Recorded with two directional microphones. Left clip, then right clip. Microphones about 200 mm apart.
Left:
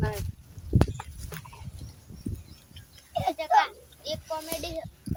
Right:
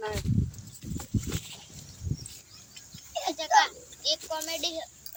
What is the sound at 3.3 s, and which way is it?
A child's voice, 30° left (ahead or behind).